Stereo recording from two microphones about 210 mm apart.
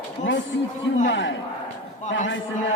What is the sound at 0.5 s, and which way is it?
Chatter, 60° left (ahead or behind).